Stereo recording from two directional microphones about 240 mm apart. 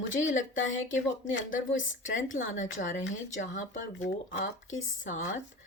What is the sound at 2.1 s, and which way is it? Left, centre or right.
A woman's voice, left.